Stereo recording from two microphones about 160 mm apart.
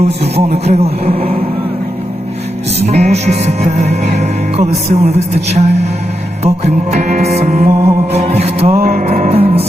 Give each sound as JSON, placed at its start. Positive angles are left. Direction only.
{"t": 0.3, "sound": "speech", "side_deg": -40}
{"t": 2.8, "sound": "music", "side_deg": -40}